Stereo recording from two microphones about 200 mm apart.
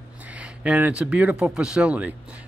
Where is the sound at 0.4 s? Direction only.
5° right (ahead or behind).